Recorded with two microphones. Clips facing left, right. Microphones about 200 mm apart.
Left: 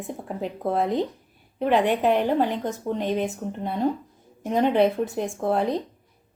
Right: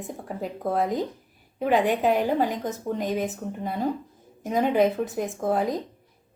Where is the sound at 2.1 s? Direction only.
10° right (ahead or behind).